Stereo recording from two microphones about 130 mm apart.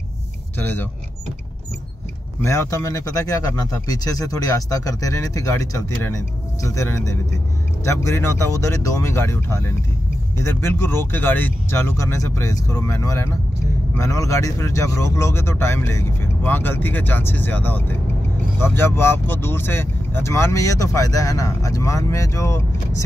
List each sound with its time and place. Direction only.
0.6 s speech: 15° left (ahead or behind)
2.4 s speech: 25° left (ahead or behind)